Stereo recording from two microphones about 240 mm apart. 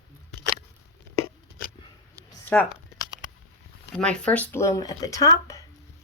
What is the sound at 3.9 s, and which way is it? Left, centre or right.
Speech, centre.